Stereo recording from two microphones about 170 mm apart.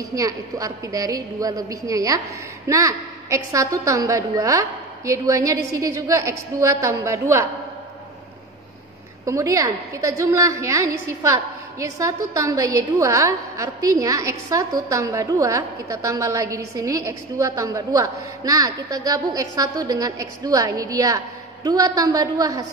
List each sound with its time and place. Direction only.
0.1 s a woman's voice: 20° right (ahead or behind)
9.2 s a woman's voice: 20° right (ahead or behind)